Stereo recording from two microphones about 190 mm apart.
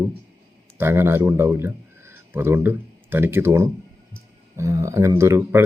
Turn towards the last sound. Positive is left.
turn(degrees=-15)  # may be behind; listen again after turning